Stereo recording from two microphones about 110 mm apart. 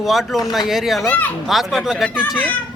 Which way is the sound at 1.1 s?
15° left (ahead or behind).